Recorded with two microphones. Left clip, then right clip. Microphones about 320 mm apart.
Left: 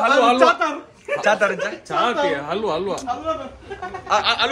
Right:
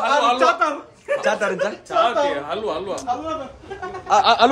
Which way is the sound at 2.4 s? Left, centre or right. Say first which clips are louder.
Left 2 dB; left.